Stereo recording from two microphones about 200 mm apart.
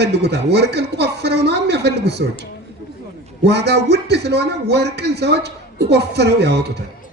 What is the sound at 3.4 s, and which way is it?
A woman's voice, 55° right (ahead or behind).